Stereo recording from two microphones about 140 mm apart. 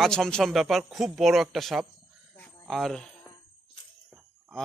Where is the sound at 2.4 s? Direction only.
Centre (ahead or behind).